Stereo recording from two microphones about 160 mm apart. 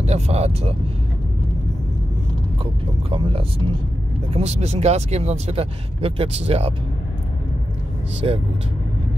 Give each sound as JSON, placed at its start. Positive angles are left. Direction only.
{"t": 0.0, "sound": "speech", "side_deg": -40}
{"t": 2.6, "sound": "speech", "side_deg": -35}
{"t": 8.2, "sound": "speech", "side_deg": -35}